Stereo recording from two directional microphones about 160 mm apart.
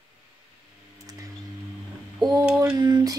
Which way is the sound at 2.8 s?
25° right (ahead or behind).